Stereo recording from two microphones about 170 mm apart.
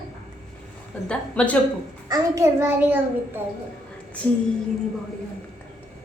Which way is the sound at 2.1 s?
15° right (ahead or behind).